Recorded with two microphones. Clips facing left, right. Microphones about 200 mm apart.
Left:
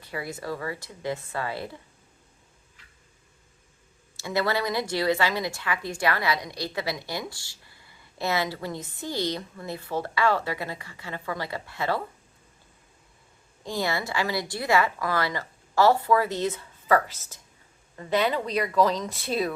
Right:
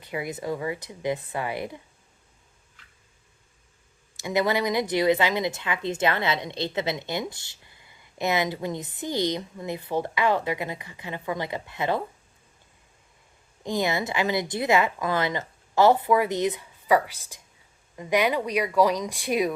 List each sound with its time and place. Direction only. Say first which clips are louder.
0.0 s speech: right 3 dB; 20° right (ahead or behind)
4.2 s a woman's voice: right 2 dB; 20° right (ahead or behind)
13.7 s a woman's voice: right 3 dB; 20° right (ahead or behind)